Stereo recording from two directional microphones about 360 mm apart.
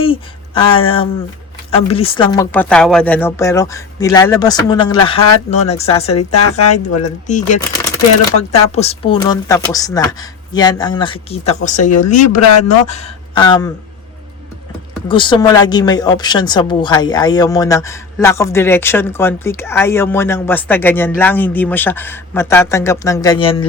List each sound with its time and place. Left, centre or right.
0.0 s speech: centre
15.0 s speech: centre